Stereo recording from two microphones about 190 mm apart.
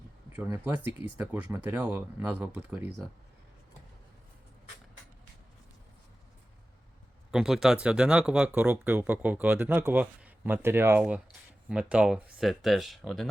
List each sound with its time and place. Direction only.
0.3 s speech: 15° right (ahead or behind)
7.3 s speech: centre (ahead or behind)